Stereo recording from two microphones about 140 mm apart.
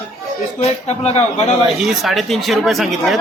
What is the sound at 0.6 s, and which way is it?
Speech, 50° left (ahead or behind).